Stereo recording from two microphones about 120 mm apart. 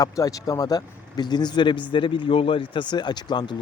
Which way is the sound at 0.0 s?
30° left (ahead or behind).